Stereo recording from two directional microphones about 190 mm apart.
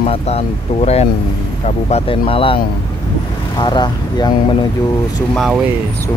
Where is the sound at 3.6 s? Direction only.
20° left (ahead or behind).